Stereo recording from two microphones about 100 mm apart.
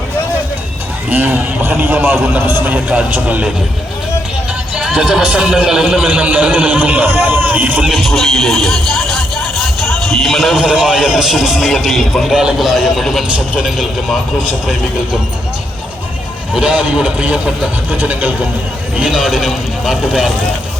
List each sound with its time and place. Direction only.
1.1 s a man's voice: 20° right (ahead or behind)
4.7 s speech: 5° right (ahead or behind)
6.1 s a man's voice: 15° right (ahead or behind)
7.9 s a man's voice: centre (ahead or behind)
16.6 s a man's voice: 10° right (ahead or behind)